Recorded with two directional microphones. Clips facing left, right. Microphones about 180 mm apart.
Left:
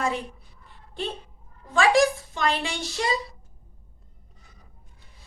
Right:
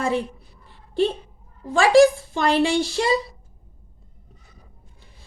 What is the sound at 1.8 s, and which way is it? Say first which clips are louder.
Speech: right 6 dB; 30° right (ahead or behind).